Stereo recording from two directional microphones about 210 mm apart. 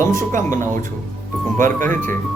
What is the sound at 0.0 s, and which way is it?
Speech, 15° left (ahead or behind).